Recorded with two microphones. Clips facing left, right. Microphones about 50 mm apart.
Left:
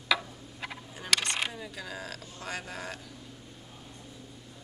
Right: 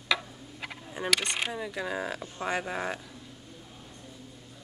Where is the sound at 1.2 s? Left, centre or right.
Centre.